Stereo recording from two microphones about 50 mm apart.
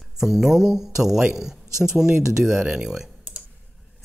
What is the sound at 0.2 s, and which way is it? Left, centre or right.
Speech, centre.